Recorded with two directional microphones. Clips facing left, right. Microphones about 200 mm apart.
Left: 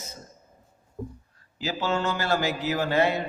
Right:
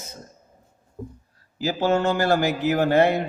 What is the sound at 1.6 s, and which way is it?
A man's voice, 45° right (ahead or behind).